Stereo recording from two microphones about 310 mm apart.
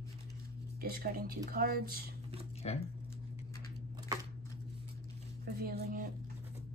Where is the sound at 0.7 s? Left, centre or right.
Right.